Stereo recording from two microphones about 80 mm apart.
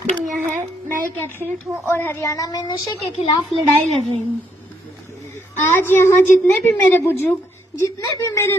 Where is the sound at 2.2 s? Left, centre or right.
Left.